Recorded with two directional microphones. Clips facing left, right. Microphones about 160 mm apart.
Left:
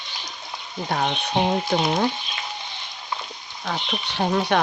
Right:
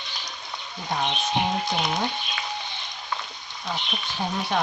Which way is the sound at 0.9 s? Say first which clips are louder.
Left 2 dB; 60° left (ahead or behind).